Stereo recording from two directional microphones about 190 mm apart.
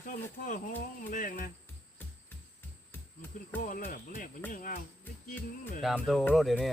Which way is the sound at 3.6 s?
45° left (ahead or behind).